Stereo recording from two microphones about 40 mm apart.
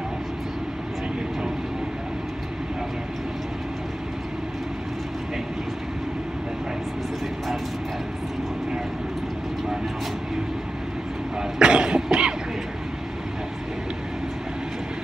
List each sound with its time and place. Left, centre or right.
11.5 s cough: right